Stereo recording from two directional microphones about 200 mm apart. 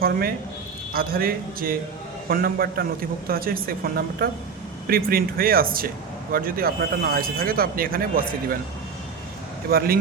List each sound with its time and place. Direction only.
0.0 s speech: 45° right (ahead or behind)
9.6 s speech: 50° right (ahead or behind)